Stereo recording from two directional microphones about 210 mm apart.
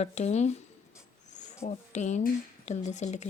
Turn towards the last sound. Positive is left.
turn(degrees=35)  # may be behind; listen again after turning